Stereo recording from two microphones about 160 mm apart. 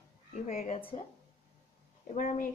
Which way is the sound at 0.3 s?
50° left (ahead or behind).